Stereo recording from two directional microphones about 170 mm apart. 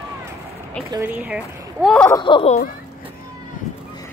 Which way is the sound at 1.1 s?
5° right (ahead or behind).